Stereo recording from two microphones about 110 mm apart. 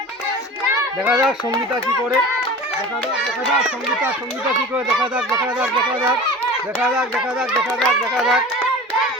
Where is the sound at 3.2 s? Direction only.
5° right (ahead or behind).